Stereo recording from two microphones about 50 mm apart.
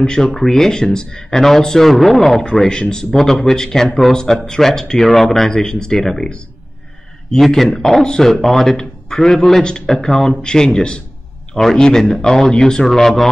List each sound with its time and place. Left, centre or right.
0.0 s speech: centre
7.4 s speech: centre